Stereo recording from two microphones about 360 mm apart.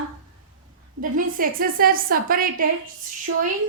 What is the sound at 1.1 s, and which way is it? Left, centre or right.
A woman's voice, right.